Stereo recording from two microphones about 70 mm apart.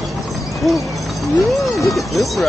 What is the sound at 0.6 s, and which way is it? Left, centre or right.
Speech, centre.